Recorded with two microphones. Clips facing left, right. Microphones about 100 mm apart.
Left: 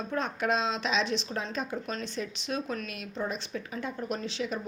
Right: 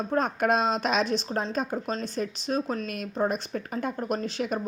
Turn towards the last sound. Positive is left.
turn(degrees=-50)  # may be behind; listen again after turning